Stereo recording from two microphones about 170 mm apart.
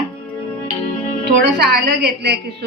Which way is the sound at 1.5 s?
65° right (ahead or behind).